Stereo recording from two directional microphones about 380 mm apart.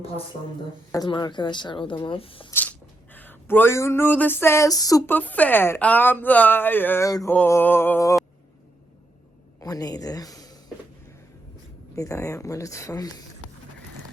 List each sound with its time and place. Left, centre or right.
0.9 s speech: centre
9.6 s a woman's voice: centre
11.9 s speech: centre